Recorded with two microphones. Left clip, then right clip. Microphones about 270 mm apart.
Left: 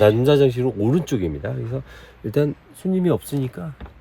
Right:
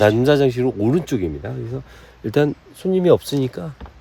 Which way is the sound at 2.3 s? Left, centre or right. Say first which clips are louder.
Right 3 dB; centre.